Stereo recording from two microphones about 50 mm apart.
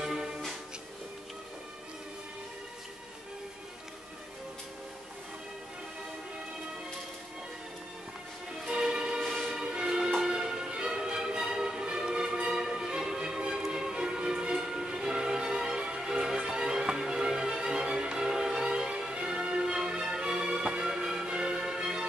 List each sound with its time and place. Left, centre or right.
0.0 s music: centre
8.6 s music: centre